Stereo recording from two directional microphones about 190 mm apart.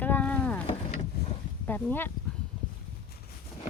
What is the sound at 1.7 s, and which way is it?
Speech, 10° left (ahead or behind).